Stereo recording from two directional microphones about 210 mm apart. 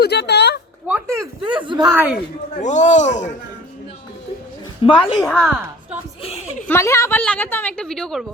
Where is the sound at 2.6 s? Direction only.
35° left (ahead or behind).